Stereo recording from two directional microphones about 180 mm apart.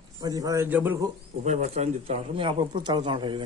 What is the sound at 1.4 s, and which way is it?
Speech, 40° right (ahead or behind).